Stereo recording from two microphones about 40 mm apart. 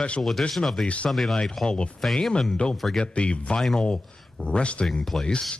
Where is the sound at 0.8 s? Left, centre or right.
Left.